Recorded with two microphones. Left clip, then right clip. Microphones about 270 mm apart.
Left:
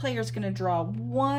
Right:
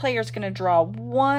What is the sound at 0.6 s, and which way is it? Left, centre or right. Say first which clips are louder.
Speech: right 7 dB; right.